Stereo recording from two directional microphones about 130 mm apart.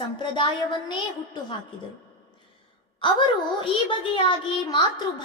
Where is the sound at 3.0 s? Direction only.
40° left (ahead or behind).